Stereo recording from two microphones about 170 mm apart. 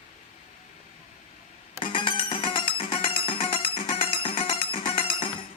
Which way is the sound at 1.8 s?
30° left (ahead or behind).